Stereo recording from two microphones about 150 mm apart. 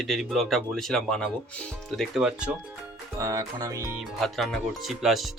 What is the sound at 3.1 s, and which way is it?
Speech, 20° right (ahead or behind).